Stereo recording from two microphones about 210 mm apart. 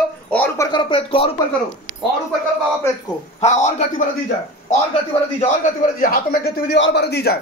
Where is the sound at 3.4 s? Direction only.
30° left (ahead or behind).